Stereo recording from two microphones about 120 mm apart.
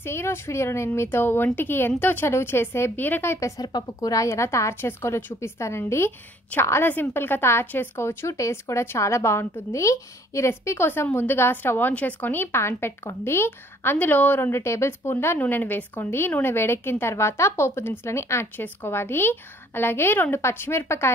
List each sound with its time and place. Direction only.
0.0 s speech: 20° left (ahead or behind)